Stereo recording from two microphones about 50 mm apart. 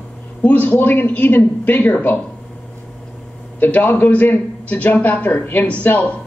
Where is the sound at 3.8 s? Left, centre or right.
Left.